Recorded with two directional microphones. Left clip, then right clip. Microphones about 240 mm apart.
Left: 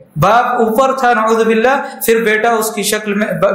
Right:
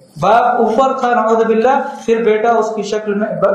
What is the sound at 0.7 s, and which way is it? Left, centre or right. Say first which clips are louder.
A man's voice: left 1 dB; left.